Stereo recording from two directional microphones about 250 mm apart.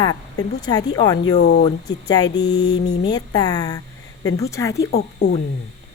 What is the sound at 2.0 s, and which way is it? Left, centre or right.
Speech, centre.